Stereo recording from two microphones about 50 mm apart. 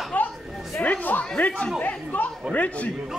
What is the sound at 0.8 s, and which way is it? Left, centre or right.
Speech, left.